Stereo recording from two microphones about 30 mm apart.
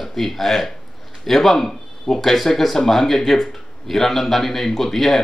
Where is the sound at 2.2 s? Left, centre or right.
Centre.